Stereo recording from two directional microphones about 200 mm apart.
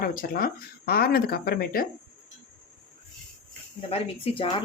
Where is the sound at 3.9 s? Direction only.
25° left (ahead or behind).